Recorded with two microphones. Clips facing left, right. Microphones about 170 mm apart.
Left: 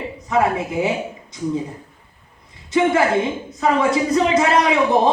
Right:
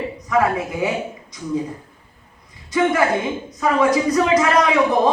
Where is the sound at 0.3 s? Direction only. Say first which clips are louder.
Even; 25° left (ahead or behind).